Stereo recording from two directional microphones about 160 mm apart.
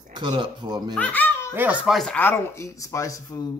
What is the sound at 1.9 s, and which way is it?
Speech, 10° left (ahead or behind).